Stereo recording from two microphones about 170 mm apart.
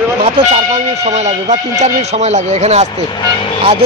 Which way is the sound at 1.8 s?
40° right (ahead or behind).